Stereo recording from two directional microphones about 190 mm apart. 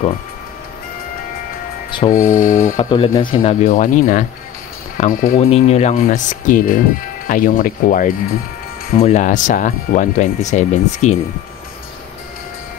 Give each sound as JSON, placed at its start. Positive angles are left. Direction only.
{"t": 1.9, "sound": "music", "side_deg": 25}
{"t": 2.1, "sound": "speech", "side_deg": 45}
{"t": 2.8, "sound": "speech", "side_deg": 25}
{"t": 3.3, "sound": "speech", "side_deg": 45}